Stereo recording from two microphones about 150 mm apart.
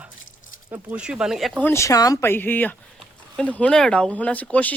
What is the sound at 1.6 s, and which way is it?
Speech, 20° left (ahead or behind).